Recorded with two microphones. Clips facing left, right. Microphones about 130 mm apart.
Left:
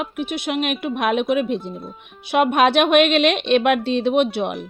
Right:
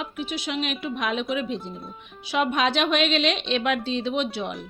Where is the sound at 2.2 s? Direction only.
60° left (ahead or behind).